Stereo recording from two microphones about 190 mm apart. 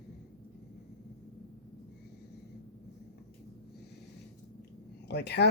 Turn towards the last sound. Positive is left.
turn(degrees=60)  # may be behind; listen again after turning